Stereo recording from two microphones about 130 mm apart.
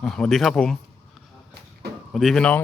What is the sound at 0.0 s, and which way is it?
Speech, 5° left (ahead or behind).